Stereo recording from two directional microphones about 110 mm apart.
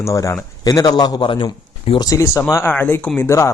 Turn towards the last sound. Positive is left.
turn(degrees=25)  # may be behind; listen again after turning